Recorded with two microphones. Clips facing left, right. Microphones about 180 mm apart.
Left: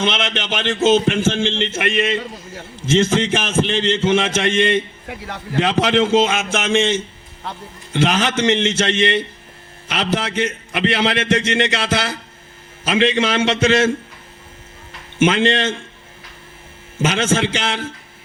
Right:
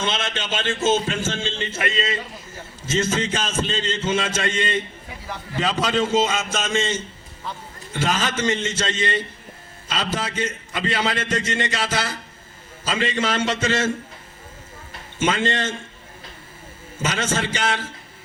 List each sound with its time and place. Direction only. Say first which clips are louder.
0.3 s a man's voice: left 4 dB; 75° left (ahead or behind)
15.2 s a man's voice: left 6 dB; 80° left
17.1 s a man's voice: left 6 dB; 75° left (ahead or behind)